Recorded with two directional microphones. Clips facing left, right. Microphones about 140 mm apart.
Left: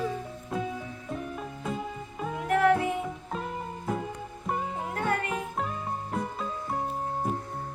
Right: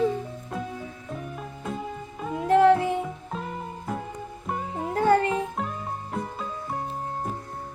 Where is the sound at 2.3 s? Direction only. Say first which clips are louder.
Right 5 dB; 25° right (ahead or behind).